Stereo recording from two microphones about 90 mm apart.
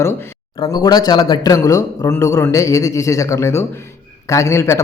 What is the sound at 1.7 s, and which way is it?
A man's voice, 40° left (ahead or behind).